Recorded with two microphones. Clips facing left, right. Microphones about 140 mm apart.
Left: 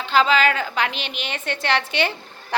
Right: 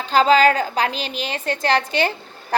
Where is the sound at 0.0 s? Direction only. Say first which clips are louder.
Right 4 dB; 40° right (ahead or behind).